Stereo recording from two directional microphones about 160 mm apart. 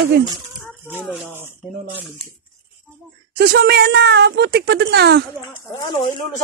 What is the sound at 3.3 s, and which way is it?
A woman's voice, 85° right.